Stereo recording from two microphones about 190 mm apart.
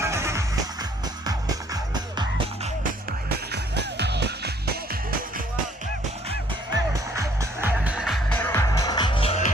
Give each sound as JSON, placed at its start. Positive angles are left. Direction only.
{"t": 0.0, "sound": "music", "side_deg": -15}
{"t": 3.2, "sound": "music", "side_deg": -60}
{"t": 6.9, "sound": "music", "side_deg": -15}